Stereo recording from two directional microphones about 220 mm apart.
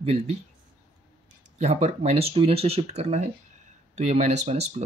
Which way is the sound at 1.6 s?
30° right (ahead or behind).